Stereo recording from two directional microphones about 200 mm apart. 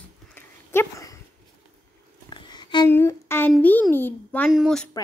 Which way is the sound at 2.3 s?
20° left (ahead or behind).